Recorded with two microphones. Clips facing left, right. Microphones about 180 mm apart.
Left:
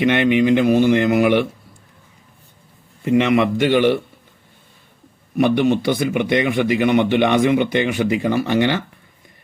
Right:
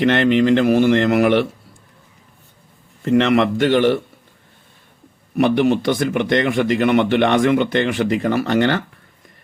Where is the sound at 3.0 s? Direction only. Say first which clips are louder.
Right 1 dB; 10° left (ahead or behind).